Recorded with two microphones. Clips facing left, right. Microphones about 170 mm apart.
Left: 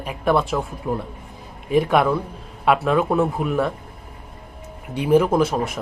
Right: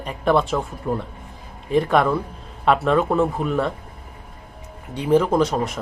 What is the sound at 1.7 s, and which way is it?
Speech, 5° left (ahead or behind).